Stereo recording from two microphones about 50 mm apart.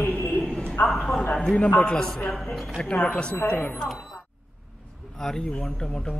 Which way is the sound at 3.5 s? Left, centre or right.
Left.